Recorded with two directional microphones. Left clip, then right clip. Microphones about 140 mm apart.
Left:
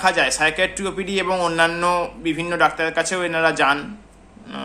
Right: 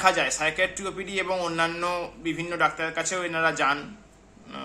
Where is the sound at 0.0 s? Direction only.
15° right (ahead or behind).